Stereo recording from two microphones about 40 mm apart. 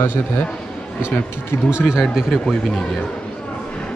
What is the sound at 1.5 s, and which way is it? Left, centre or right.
Speech, left.